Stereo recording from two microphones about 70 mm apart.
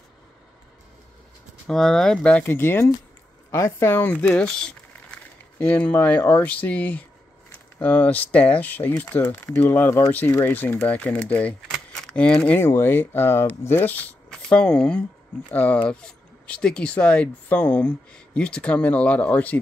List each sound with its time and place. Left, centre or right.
1.7 s speech: centre
2.4 s speech: left; by 5.2 s centre
5.6 s speech: left
10.8 s speech: centre
12.5 s speech: left
14.5 s speech: centre
15.5 s speech: left